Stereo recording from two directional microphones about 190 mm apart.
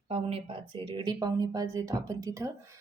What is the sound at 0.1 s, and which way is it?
A woman's voice, 30° right (ahead or behind).